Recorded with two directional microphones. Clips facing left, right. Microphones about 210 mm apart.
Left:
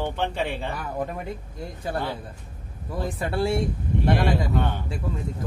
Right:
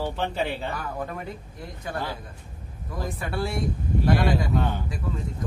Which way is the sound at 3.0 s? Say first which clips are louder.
Left 4 dB; 30° left (ahead or behind).